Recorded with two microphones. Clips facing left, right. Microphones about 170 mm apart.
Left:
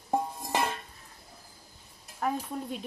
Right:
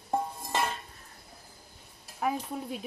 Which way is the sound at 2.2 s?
5° right (ahead or behind).